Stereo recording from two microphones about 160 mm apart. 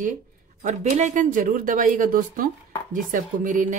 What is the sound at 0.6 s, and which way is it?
Speech, 45° right (ahead or behind).